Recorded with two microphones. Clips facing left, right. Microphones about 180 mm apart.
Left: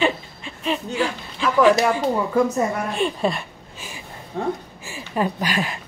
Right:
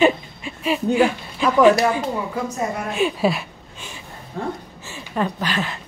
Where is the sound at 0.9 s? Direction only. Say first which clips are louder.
Right 6 dB; 15° right (ahead or behind).